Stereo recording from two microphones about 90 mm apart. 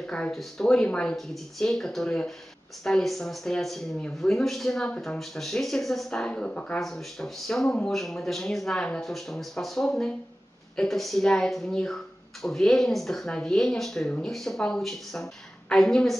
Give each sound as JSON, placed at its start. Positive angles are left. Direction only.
{"t": 0.0, "sound": "a woman's voice", "side_deg": 10}
{"t": 6.8, "sound": "a woman's voice", "side_deg": 5}